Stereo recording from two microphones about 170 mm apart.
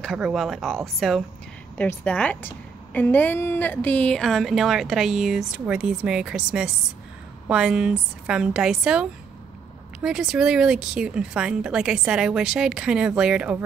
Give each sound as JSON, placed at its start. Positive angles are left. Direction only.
{"t": 0.0, "sound": "a woman's voice", "side_deg": 0}